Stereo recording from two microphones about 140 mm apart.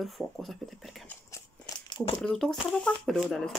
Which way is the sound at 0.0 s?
Centre (ahead or behind).